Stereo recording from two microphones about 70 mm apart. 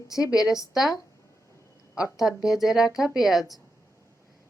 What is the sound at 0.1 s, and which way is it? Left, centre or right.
Speech, left.